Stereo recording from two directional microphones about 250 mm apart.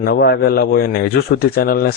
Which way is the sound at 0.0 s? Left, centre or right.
Left.